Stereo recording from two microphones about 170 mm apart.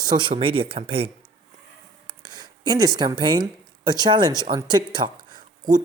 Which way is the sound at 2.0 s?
25° right (ahead or behind).